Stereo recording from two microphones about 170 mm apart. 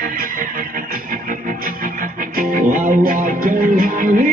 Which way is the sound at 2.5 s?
55° right (ahead or behind).